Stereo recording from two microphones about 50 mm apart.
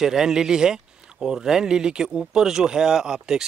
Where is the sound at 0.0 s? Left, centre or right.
Centre.